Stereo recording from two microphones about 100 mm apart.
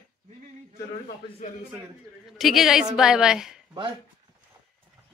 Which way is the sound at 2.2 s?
Centre (ahead or behind).